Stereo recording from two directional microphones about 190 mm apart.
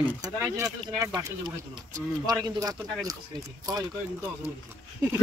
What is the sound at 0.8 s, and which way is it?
Speech, 20° right (ahead or behind).